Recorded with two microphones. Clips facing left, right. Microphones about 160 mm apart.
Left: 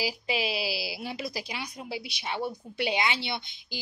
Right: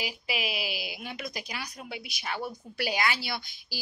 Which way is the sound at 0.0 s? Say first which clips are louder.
Left 4 dB; 30° left (ahead or behind).